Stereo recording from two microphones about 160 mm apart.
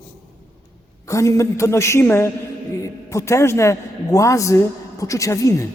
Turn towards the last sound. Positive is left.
turn(degrees=20)  # may be behind; listen again after turning